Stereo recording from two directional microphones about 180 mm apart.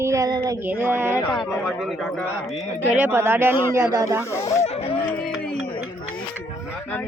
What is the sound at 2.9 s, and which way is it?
A woman's voice, 10° right (ahead or behind).